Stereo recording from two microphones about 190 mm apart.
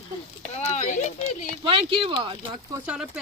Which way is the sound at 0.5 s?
35° left (ahead or behind).